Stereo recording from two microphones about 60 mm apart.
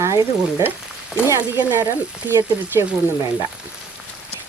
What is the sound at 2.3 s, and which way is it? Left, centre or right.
Frying, right.